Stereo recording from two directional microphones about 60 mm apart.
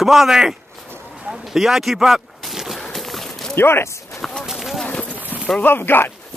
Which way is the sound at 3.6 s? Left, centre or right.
Left.